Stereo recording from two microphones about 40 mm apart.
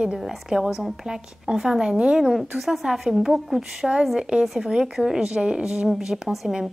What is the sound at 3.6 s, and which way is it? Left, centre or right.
Speech, right.